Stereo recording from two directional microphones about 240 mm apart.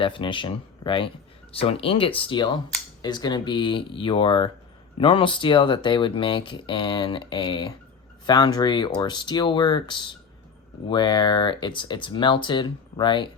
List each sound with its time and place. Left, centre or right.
0.0 s speech: left